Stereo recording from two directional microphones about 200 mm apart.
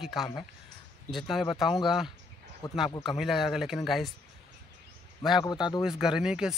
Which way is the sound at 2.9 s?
25° left (ahead or behind).